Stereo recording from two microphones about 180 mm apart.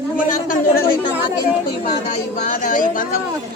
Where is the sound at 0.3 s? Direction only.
50° left (ahead or behind).